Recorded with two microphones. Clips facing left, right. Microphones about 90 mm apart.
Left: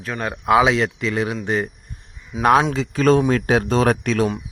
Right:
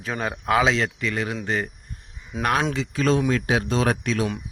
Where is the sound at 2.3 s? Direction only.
Centre (ahead or behind).